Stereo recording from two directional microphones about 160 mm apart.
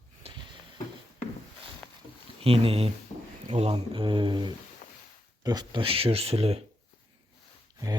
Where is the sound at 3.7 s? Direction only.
30° right (ahead or behind).